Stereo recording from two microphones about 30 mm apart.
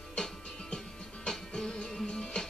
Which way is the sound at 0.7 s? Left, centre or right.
Left.